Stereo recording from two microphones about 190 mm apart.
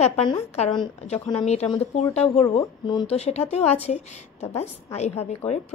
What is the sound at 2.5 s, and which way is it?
Speech, 30° left (ahead or behind).